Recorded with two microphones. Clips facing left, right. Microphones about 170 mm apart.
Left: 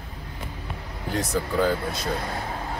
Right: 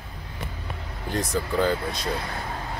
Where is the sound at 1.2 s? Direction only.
5° left (ahead or behind).